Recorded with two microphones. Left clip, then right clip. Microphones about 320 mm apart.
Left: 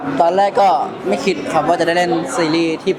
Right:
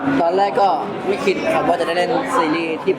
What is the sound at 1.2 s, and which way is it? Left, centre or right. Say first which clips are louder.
Speech: left 1 dB; left.